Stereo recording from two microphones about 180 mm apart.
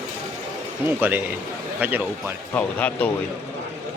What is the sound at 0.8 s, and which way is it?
Speech, 10° right (ahead or behind).